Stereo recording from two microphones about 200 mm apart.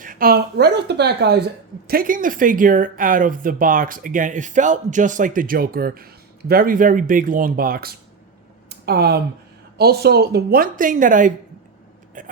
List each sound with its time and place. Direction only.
0.0 s speech: 45° right (ahead or behind)
1.9 s speech: 45° right (ahead or behind)